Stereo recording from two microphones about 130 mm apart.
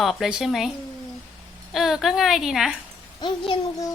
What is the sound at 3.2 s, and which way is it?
Speech, 35° left (ahead or behind).